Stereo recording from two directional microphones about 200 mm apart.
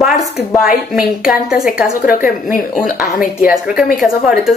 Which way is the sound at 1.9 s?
45° left (ahead or behind).